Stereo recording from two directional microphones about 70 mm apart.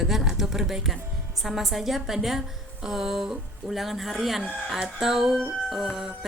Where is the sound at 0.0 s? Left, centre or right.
Centre.